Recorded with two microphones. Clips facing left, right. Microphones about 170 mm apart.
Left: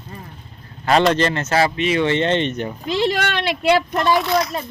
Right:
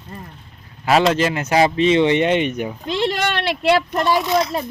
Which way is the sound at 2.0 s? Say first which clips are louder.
Right 2 dB; 15° right (ahead or behind).